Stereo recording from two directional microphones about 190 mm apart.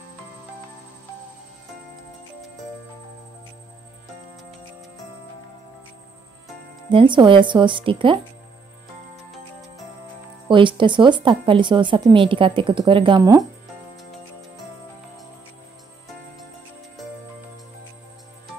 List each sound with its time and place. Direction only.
6.9 s a woman's voice: 25° right (ahead or behind)
10.5 s a woman's voice: 25° right (ahead or behind)